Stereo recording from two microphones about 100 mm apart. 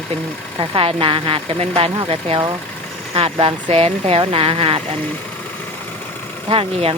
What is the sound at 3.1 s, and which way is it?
Speech, 70° right (ahead or behind).